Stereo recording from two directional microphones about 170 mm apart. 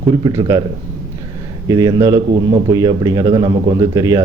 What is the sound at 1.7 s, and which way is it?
A man's voice, 20° right (ahead or behind).